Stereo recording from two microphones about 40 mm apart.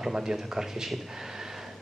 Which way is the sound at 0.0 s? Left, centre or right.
Centre.